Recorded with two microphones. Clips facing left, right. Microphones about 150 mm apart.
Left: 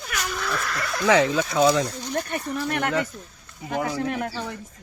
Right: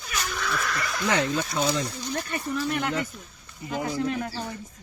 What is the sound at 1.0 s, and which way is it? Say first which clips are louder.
Speech: left 6 dB; 90° left.